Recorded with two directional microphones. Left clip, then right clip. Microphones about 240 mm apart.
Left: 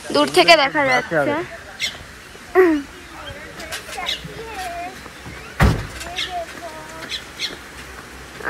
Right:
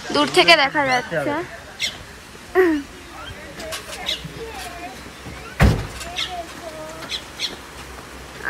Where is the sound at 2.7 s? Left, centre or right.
Centre.